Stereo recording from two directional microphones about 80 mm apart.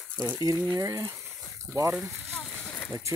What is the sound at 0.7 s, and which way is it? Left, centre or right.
Speech, right.